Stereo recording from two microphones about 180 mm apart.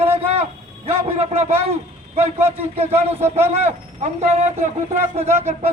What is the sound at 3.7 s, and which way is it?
Speech, 35° right (ahead or behind).